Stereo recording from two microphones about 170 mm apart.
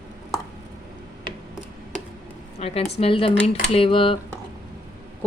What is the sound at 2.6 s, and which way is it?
Speech, 35° left (ahead or behind).